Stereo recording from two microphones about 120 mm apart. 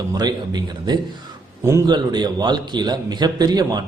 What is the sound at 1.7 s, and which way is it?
Speech, 25° right (ahead or behind).